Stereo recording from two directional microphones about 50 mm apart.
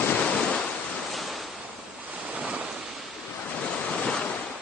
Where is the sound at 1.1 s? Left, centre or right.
Centre.